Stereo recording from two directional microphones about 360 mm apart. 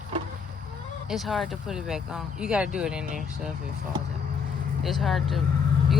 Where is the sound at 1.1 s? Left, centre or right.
Centre.